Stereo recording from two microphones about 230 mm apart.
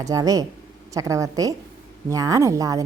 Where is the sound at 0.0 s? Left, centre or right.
Centre.